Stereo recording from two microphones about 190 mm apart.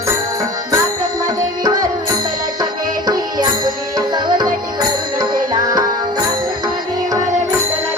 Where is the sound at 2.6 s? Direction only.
20° right (ahead or behind).